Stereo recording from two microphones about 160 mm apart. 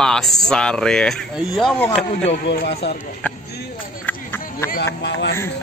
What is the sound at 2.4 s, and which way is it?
Speech, 90° left.